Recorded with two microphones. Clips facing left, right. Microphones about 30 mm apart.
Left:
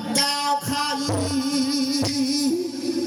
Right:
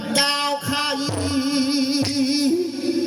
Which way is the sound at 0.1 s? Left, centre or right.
Right.